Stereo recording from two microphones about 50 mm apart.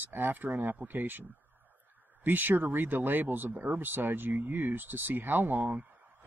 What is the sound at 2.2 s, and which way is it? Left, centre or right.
Speech, right.